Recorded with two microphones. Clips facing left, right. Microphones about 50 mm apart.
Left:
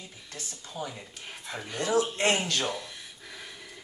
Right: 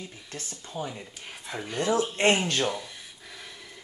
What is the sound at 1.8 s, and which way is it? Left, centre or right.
Speech, right.